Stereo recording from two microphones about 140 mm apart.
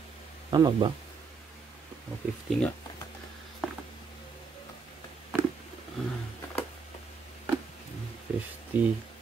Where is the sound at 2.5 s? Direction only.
10° left (ahead or behind).